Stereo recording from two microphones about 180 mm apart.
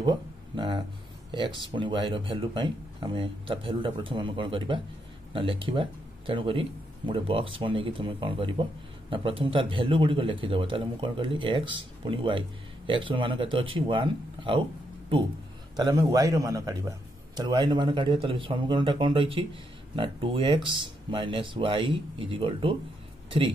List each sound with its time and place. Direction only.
0.6 s a sound: 25° right (ahead or behind)
1.3 s speech: 25° right (ahead or behind)
15.7 s speech: 20° right (ahead or behind)